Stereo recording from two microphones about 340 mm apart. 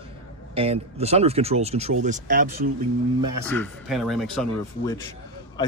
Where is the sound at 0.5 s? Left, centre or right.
Centre.